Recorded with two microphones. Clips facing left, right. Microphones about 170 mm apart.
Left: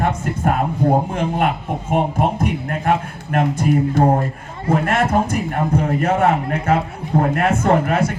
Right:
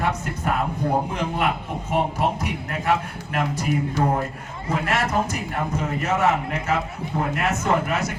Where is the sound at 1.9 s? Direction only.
50° left (ahead or behind).